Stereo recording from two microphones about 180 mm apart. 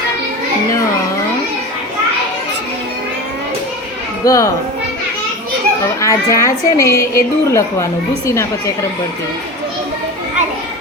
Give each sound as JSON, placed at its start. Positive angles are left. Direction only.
{"t": 4.2, "sound": "a woman's voice", "side_deg": 20}
{"t": 6.0, "sound": "a woman's voice", "side_deg": 20}